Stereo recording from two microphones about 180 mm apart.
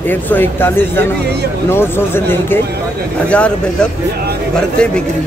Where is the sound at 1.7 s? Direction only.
15° left (ahead or behind).